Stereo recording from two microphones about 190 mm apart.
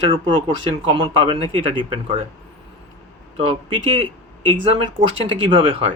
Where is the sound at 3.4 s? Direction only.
30° right (ahead or behind).